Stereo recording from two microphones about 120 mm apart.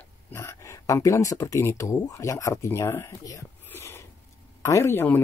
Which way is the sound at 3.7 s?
20° left (ahead or behind).